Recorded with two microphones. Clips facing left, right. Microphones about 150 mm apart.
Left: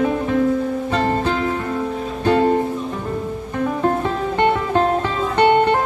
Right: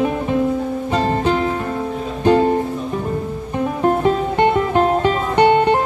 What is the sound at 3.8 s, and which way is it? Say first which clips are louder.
Music: right 6 dB; 20° right (ahead or behind).